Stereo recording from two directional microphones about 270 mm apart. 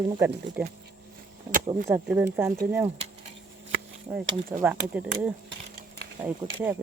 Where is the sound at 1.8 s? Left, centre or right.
Centre.